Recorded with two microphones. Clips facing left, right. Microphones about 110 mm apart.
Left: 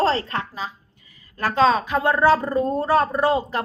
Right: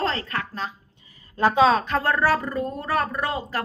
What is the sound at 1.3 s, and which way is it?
Speech, 20° right (ahead or behind).